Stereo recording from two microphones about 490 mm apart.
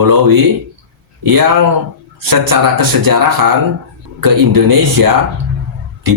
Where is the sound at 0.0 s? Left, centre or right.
Right.